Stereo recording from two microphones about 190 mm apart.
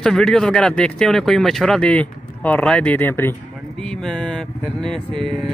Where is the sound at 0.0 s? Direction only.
Centre (ahead or behind).